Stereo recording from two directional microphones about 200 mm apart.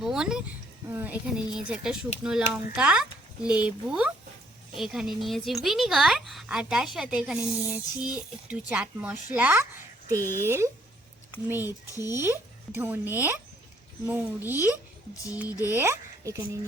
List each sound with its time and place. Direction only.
0.0 s a woman's voice: 5° right (ahead or behind)
11.9 s speech: 15° left (ahead or behind)
12.2 s speech: 10° right (ahead or behind)
15.4 s speech: 15° left (ahead or behind)
15.7 s speech: 15° right (ahead or behind)